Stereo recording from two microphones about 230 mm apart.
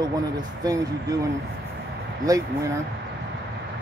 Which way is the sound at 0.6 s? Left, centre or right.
Centre.